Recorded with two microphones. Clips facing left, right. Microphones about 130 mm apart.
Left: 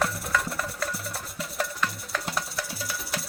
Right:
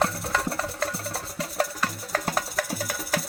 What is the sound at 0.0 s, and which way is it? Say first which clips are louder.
Music: right 2 dB; 30° right (ahead or behind).